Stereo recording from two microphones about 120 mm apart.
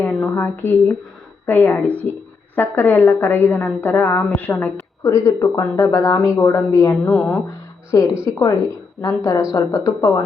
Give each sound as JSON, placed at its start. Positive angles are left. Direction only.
{"t": 0.0, "sound": "a woman's voice", "side_deg": 15}
{"t": 7.1, "sound": "a woman's voice", "side_deg": 15}
{"t": 7.9, "sound": "speech", "side_deg": 30}